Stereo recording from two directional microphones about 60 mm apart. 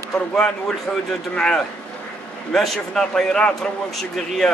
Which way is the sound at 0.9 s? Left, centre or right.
Left.